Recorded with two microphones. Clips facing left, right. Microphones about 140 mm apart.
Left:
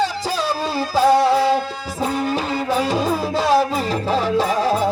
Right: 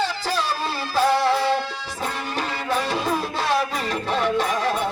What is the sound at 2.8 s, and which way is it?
Music, 35° left (ahead or behind).